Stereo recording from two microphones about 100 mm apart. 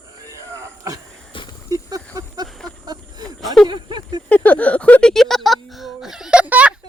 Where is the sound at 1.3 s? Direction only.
60° left (ahead or behind).